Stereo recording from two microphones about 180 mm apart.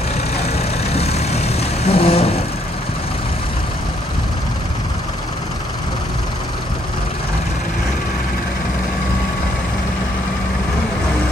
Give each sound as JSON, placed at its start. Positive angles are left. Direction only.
{"t": 0.6, "sound": "vehicle", "side_deg": 35}